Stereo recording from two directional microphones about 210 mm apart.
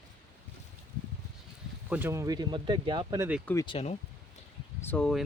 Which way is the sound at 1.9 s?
10° right (ahead or behind).